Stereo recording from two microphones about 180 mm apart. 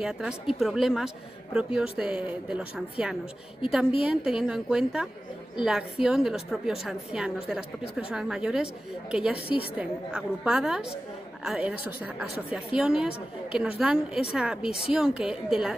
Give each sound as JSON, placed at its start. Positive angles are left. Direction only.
{"t": 0.0, "sound": "a woman's voice", "side_deg": -5}